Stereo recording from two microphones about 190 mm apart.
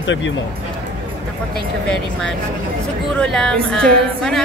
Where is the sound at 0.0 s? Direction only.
80° left.